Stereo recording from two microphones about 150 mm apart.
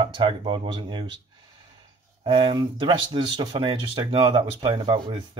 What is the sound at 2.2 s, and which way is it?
Speech, 35° right (ahead or behind).